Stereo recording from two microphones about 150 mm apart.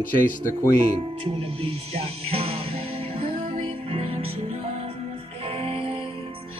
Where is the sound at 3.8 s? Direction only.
40° right (ahead or behind).